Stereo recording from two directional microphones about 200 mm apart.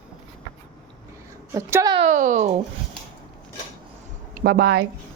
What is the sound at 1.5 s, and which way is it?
Speech, 15° right (ahead or behind).